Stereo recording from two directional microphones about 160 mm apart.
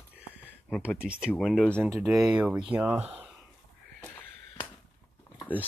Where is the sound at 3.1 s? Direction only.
5° right (ahead or behind).